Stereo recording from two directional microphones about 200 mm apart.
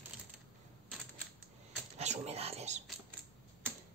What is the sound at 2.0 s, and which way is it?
Speech, 30° right (ahead or behind).